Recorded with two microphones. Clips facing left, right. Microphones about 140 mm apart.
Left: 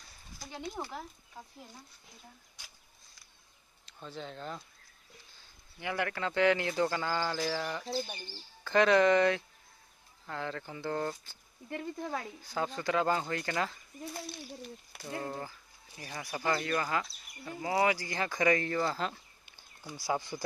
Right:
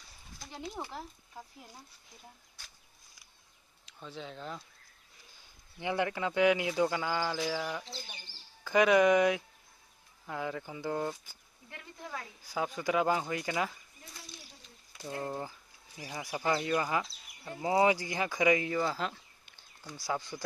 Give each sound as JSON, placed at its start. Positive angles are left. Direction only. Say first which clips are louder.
{"t": 0.4, "sound": "speech", "louder": "left 1 dB", "side_deg": 0}
{"t": 3.8, "sound": "speech", "louder": "left 1 dB", "side_deg": 0}
{"t": 5.8, "sound": "speech", "louder": "right 2 dB", "side_deg": -20}
{"t": 7.8, "sound": "speech", "louder": "left 11 dB", "side_deg": 60}
{"t": 8.6, "sound": "speech", "louder": "even", "side_deg": -10}
{"t": 11.7, "sound": "speech", "louder": "left 7 dB", "side_deg": 40}
{"t": 12.4, "sound": "speech", "louder": "right 1 dB", "side_deg": -5}
{"t": 14.1, "sound": "speech", "louder": "left 10 dB", "side_deg": 60}
{"t": 15.0, "sound": "speech", "louder": "right 1 dB", "side_deg": -15}
{"t": 19.5, "sound": "a sound", "louder": "left 2 dB", "side_deg": 10}
{"t": 20.1, "sound": "speech", "louder": "left 2 dB", "side_deg": 10}